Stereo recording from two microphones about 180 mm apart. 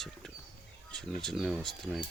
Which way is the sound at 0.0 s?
Centre (ahead or behind).